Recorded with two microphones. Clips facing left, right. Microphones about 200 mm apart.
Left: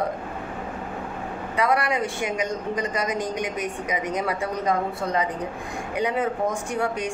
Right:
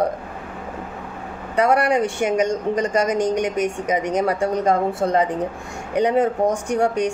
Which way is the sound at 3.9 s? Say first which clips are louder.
Right 6 dB; 45° right (ahead or behind).